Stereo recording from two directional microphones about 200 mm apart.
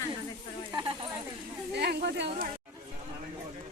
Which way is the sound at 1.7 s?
55° right (ahead or behind).